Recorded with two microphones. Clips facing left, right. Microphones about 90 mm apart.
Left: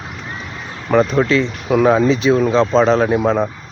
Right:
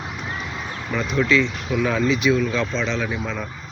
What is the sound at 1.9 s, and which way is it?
Speech, 35° left (ahead or behind).